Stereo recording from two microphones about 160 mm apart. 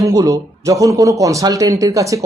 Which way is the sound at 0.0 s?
20° right (ahead or behind).